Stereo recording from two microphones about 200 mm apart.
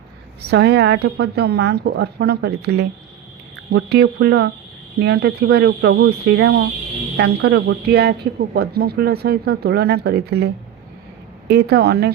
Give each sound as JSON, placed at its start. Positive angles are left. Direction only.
{"t": 0.5, "sound": "a woman's voice", "side_deg": -55}